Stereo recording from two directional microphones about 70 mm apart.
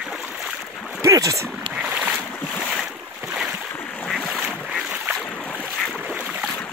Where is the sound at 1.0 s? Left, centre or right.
Right.